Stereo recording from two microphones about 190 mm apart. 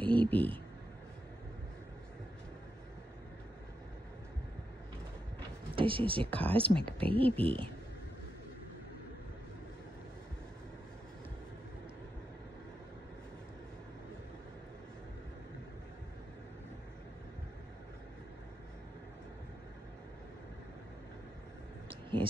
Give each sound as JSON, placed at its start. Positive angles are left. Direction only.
{"t": 0.0, "sound": "speech", "side_deg": 10}
{"t": 5.8, "sound": "speech", "side_deg": -25}
{"t": 6.3, "sound": "speech", "side_deg": 5}
{"t": 6.9, "sound": "speech", "side_deg": -30}
{"t": 21.8, "sound": "a sound", "side_deg": -25}